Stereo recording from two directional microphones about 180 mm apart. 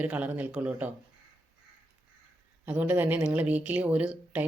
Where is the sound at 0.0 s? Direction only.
10° right (ahead or behind).